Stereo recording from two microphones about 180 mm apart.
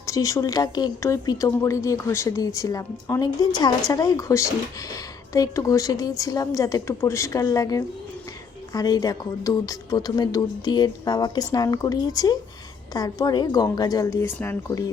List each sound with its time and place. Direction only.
0.0 s speech: 20° left (ahead or behind)